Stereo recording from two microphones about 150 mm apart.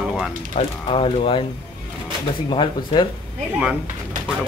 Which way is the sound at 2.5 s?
35° left (ahead or behind).